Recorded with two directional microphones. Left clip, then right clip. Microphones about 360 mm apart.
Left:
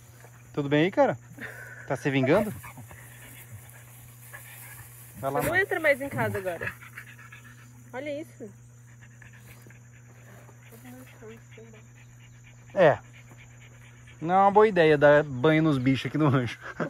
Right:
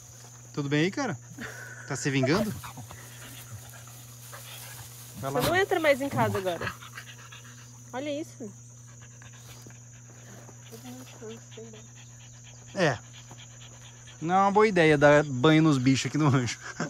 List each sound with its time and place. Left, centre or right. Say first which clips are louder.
0.6 s speech: left 6 dB; centre
1.4 s a sound: even; right
1.9 s speech: left 3 dB; centre
5.2 s speech: left 1 dB; centre
5.5 s speech: right 1 dB; right
6.3 s dog: right 1 dB; centre
7.9 s speech: right 1 dB; right
12.7 s speech: left 7 dB; centre
14.2 s speech: left 3 dB; centre